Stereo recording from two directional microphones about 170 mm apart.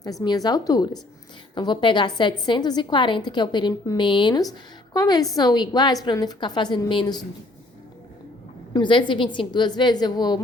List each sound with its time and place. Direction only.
0.0 s a woman's voice: 20° left (ahead or behind)
8.7 s a woman's voice: 30° left (ahead or behind)